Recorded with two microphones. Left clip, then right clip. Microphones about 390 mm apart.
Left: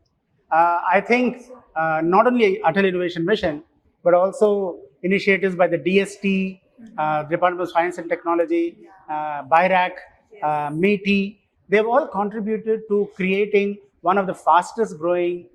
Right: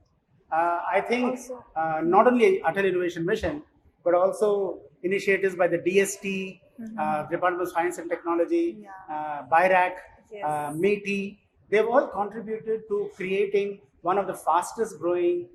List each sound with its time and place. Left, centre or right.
0.4 s speech: left
1.7 s speech: left
11.0 s speech: left
11.7 s speech: left